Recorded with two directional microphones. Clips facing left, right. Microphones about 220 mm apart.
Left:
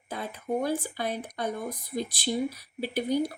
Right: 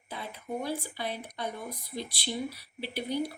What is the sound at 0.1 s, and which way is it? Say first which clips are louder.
A woman's voice: left 6 dB; 45° left (ahead or behind).